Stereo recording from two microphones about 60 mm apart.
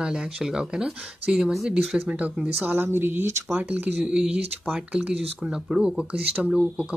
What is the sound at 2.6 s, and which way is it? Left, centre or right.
Speech, right.